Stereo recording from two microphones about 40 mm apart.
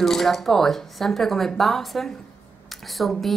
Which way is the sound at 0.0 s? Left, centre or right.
Centre.